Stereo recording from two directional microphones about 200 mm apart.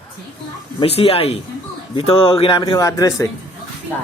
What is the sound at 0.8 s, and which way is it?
A man's voice, 30° left (ahead or behind).